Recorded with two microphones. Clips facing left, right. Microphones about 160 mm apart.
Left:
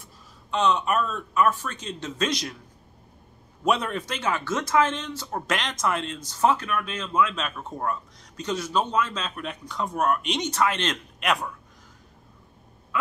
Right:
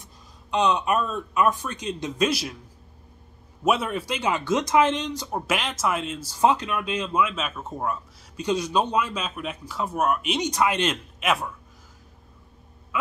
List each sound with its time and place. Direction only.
0.0 s speech: 15° right (ahead or behind)
3.6 s speech: 5° right (ahead or behind)